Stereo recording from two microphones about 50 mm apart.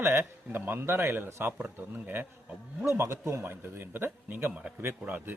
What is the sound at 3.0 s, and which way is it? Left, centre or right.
Speech, right.